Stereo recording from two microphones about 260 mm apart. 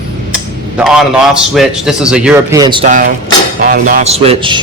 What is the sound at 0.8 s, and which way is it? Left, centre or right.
A man's voice, centre.